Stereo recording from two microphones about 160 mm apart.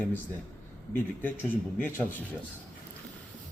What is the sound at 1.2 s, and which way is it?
Speech, 10° left (ahead or behind).